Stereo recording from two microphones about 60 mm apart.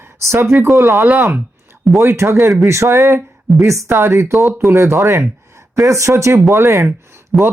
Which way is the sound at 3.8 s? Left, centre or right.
Right.